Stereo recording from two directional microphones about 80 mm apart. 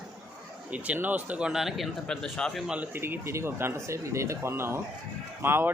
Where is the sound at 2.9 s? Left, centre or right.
Right.